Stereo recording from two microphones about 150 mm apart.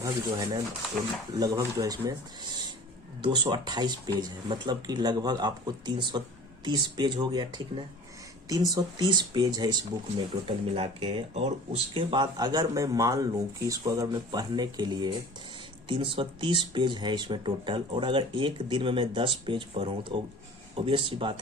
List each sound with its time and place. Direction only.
0.0 s speech: 25° right (ahead or behind)
10.2 s speech: 40° right (ahead or behind)
11.9 s speech: 30° right (ahead or behind)